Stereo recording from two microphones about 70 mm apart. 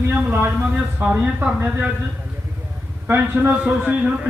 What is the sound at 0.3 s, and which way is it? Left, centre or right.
Speech, right.